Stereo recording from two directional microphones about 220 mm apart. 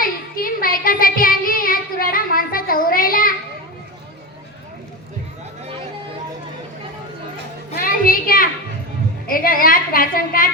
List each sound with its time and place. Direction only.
0.0 s child singing: 40° left (ahead or behind)
7.7 s a sound: 40° left (ahead or behind)
9.2 s music: 40° left (ahead or behind)